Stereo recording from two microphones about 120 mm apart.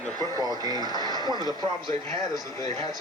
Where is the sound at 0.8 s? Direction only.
35° left (ahead or behind).